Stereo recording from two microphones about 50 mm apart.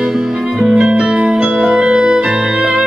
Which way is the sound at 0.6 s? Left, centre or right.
Centre.